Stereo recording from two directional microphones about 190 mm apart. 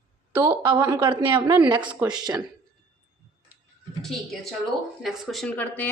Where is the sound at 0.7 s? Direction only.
15° right (ahead or behind).